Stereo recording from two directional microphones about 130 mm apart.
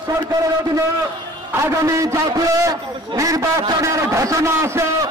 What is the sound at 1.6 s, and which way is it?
A man's voice, 25° right (ahead or behind).